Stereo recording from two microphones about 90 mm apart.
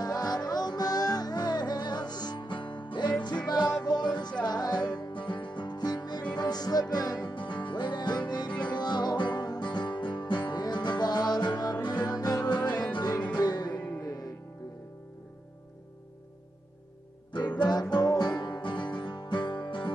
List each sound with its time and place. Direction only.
0.0 s music: 50° left (ahead or behind)
13.7 s music: 15° left (ahead or behind)
17.3 s music: 55° left (ahead or behind)